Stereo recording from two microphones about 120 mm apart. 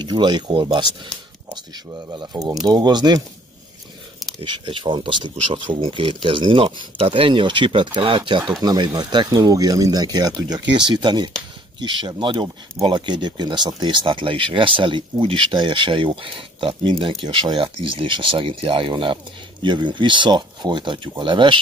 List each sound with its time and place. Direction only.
0.0 s speech: 35° right (ahead or behind)
4.4 s speech: 45° right (ahead or behind)